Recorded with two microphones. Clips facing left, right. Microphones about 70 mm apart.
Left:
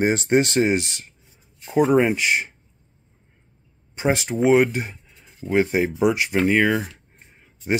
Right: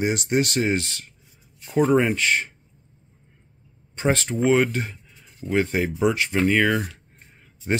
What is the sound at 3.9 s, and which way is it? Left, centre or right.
Speech, centre.